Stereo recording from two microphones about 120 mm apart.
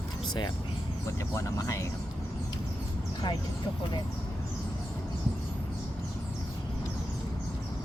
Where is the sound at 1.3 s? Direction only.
25° left (ahead or behind).